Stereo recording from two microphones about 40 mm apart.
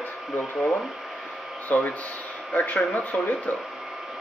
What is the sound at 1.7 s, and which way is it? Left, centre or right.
Speech, left.